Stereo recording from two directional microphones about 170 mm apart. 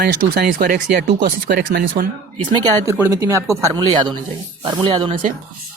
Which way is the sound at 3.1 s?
20° right (ahead or behind).